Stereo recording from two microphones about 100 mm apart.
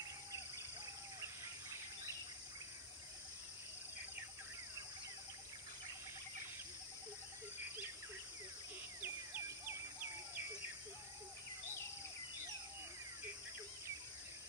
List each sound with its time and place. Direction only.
1.2 s bird: 30° right (ahead or behind)
9.0 s bird: 20° right (ahead or behind)